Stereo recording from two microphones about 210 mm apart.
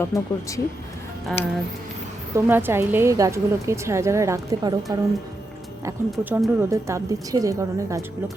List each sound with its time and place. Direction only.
0.0 s speech: 15° left (ahead or behind)
1.3 s speech: 5° left (ahead or behind)
2.3 s a woman's voice: 10° right (ahead or behind)
6.1 s a woman's voice: 5° right (ahead or behind)